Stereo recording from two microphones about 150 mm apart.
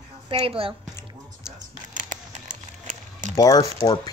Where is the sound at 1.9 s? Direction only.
60° right (ahead or behind).